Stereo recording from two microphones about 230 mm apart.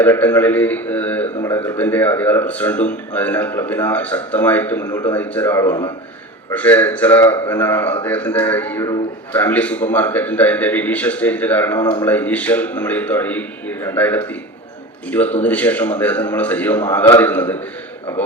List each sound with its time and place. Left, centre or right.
0.0 s a man's voice: centre
5.6 s a man's voice: centre
6.5 s a man's voice: centre